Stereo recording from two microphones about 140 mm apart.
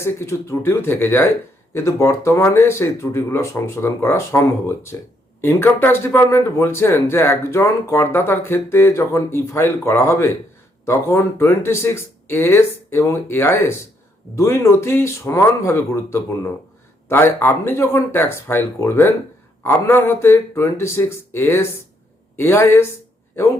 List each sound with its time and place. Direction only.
0.0 s speech: 20° left (ahead or behind)